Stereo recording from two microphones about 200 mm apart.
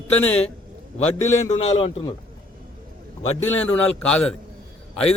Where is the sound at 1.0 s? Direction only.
35° left (ahead or behind).